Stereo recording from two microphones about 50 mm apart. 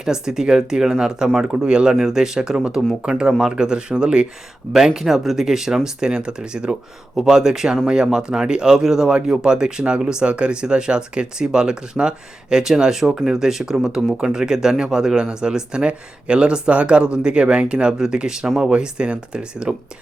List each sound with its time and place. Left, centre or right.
0.0 s speech: centre
4.9 s speech: centre
18.7 s speech: right